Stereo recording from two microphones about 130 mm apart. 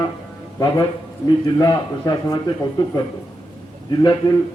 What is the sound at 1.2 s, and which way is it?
A man's voice, 30° left (ahead or behind).